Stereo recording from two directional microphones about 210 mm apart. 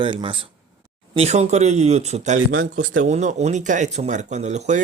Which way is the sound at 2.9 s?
35° right (ahead or behind).